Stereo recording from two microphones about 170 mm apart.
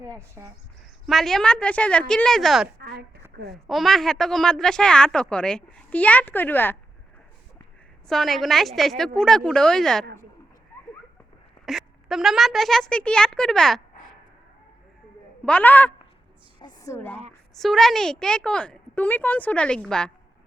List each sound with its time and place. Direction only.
0.0 s speech: 15° right (ahead or behind)
1.0 s a woman's voice: centre (ahead or behind)
8.0 s a woman's voice: centre (ahead or behind)
11.6 s a woman's voice: centre (ahead or behind)
15.4 s a man's voice: 10° left (ahead or behind)
16.6 s a woman's voice: 25° left (ahead or behind)
17.5 s a woman's voice: centre (ahead or behind)